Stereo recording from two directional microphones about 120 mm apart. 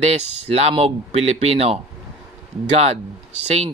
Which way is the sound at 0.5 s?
60° right (ahead or behind).